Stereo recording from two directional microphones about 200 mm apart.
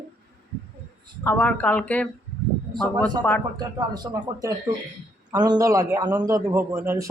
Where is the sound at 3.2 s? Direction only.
5° left (ahead or behind).